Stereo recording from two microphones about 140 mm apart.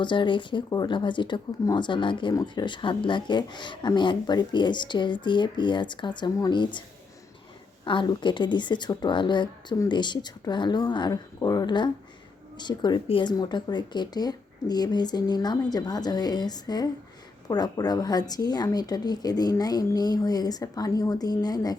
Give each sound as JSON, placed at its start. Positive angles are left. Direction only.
{"t": 0.0, "sound": "speech", "side_deg": 35}
{"t": 7.9, "sound": "speech", "side_deg": 35}